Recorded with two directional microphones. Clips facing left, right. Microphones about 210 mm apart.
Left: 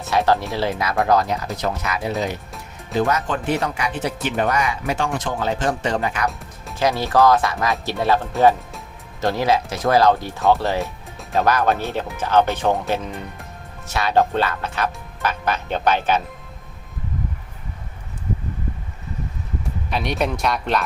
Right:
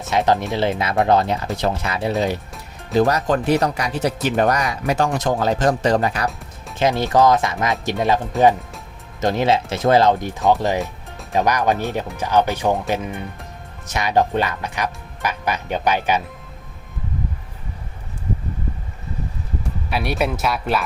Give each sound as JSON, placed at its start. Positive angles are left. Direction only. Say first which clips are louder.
{"t": 0.1, "sound": "speech", "louder": "right 1 dB", "side_deg": -20}
{"t": 6.7, "sound": "speech", "louder": "right 1 dB", "side_deg": -20}
{"t": 9.2, "sound": "speech", "louder": "right 1 dB", "side_deg": -20}
{"t": 19.9, "sound": "speech", "louder": "right 1 dB", "side_deg": -5}